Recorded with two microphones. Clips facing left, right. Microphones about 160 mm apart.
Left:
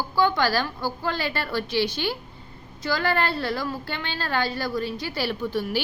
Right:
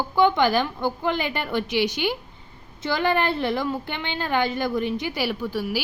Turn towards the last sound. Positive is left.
turn(degrees=-10)  # may be behind; listen again after turning